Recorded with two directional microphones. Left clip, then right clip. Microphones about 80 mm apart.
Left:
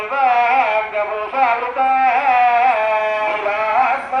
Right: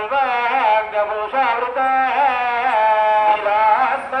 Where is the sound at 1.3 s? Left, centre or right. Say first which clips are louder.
Left 3 dB; right.